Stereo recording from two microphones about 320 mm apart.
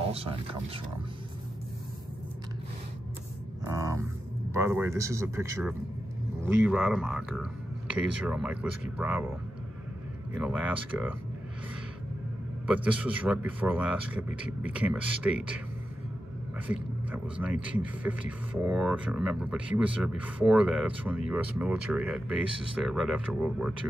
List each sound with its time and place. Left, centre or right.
0.0 s speech: centre
3.6 s a sound: centre
4.6 s speech: centre
10.4 s speech: centre
12.6 s speech: centre
16.6 s speech: centre